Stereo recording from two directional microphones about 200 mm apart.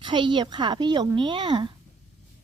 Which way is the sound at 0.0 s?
25° right (ahead or behind).